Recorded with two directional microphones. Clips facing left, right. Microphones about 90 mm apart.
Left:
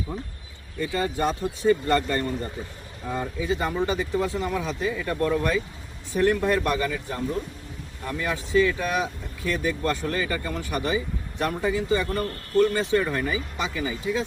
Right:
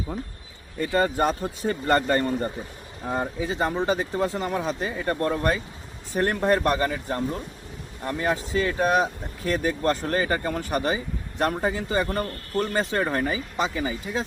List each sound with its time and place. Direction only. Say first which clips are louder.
0.8 s speech: right 3 dB; 50° right (ahead or behind)